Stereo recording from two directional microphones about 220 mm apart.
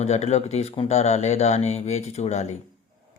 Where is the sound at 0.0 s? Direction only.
30° left (ahead or behind).